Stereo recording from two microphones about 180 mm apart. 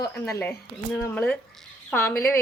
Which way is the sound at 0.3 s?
15° left (ahead or behind).